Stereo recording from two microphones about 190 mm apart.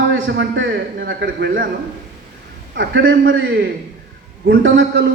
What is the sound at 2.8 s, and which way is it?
Speech, 70° right (ahead or behind).